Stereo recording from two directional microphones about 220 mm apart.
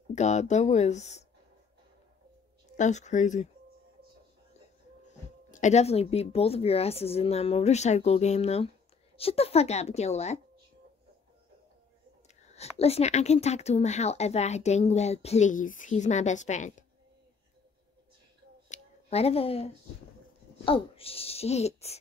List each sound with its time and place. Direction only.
0.1 s speech: 30° left (ahead or behind)
2.8 s speech: 30° left (ahead or behind)
5.0 s speech: 35° left (ahead or behind)
12.4 s speech: 30° left (ahead or behind)
18.7 s a sound: 30° left (ahead or behind)
20.6 s speech: 25° left (ahead or behind)